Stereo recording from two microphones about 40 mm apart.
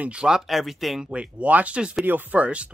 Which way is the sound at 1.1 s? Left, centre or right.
Right.